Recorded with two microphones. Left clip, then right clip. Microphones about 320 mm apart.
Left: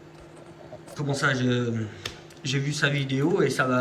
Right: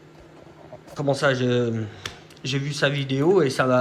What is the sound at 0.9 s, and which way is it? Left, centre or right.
Speech, centre.